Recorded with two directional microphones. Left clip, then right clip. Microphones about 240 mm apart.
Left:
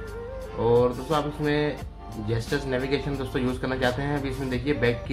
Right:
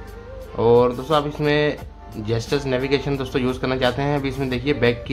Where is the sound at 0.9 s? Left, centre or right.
Centre.